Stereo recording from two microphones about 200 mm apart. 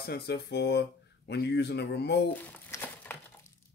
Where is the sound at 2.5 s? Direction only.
10° left (ahead or behind).